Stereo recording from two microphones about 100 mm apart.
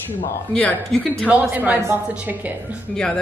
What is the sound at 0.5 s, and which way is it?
Speech, 10° left (ahead or behind).